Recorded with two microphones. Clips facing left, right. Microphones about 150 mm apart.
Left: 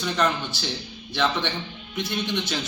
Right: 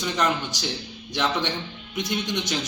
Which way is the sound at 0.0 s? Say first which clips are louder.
Even; 15° right (ahead or behind).